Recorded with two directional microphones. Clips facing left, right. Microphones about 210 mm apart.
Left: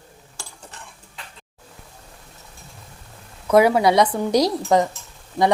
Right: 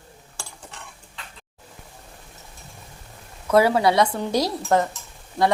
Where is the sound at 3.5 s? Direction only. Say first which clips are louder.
Left 2 dB; 15° left (ahead or behind).